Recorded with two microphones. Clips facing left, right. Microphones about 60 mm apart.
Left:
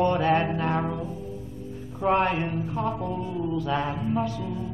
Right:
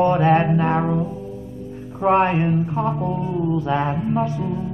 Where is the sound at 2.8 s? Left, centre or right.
Centre.